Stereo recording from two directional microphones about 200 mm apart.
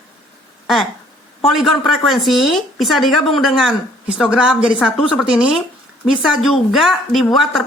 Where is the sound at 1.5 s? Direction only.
Centre (ahead or behind).